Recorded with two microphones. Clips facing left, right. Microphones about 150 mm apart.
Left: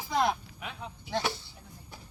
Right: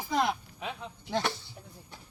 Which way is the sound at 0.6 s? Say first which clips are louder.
Right 5 dB; 30° right (ahead or behind).